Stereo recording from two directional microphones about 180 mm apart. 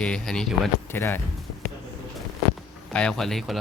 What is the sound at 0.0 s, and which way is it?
Speech, 5° left (ahead or behind).